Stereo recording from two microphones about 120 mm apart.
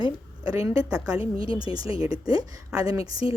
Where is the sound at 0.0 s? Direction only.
30° right (ahead or behind).